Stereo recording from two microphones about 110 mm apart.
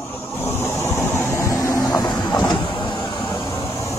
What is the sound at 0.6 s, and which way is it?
Vehicle, 20° left (ahead or behind).